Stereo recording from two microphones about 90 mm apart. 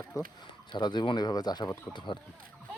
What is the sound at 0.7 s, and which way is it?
Speech, 55° left (ahead or behind).